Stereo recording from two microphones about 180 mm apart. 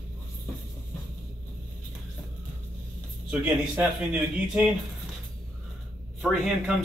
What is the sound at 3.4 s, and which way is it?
Speech, 10° right (ahead or behind).